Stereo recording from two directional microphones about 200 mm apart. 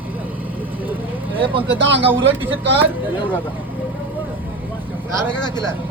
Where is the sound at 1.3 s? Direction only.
25° right (ahead or behind).